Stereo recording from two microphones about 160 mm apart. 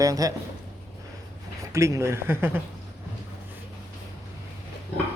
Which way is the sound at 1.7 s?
15° right (ahead or behind).